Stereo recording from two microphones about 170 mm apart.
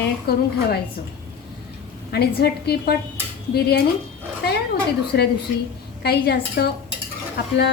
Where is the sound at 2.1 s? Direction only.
70° left (ahead or behind).